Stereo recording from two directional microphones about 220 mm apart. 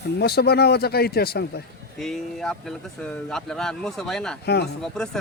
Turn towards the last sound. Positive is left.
turn(degrees=5)  # may be behind; listen again after turning